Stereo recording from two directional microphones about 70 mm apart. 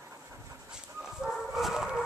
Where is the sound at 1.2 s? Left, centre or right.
Centre.